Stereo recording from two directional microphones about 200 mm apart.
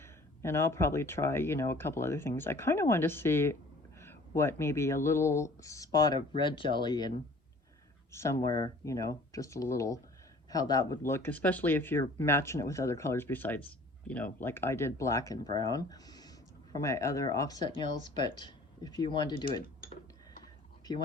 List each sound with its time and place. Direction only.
0.0 s speech: 10° left (ahead or behind)
8.1 s speech: 15° left (ahead or behind)